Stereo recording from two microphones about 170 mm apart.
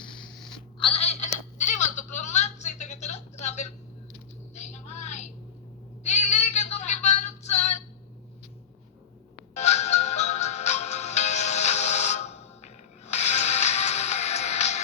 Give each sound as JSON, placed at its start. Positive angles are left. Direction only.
{"t": 0.8, "sound": "telephone", "side_deg": 35}
{"t": 4.5, "sound": "a sound", "side_deg": 40}
{"t": 9.6, "sound": "music", "side_deg": 40}